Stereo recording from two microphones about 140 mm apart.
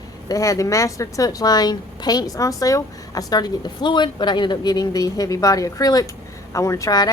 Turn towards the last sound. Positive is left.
turn(degrees=25)  # may be behind; listen again after turning